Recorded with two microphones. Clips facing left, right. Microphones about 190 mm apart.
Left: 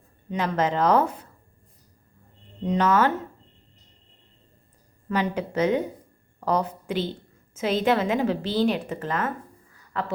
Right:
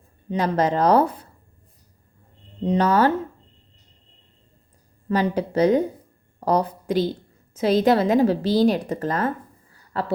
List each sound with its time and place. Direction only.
0.3 s a woman's voice: 35° right (ahead or behind)
2.6 s a woman's voice: 35° right (ahead or behind)
5.0 s a woman's voice: 35° right (ahead or behind)
9.7 s a sound: 35° right (ahead or behind)